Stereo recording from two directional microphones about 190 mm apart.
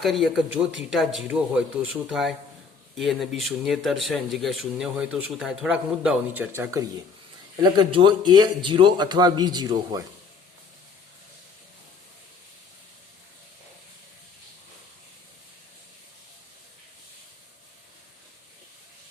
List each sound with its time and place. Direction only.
0.0 s speech: centre (ahead or behind)
7.6 s speech: 25° right (ahead or behind)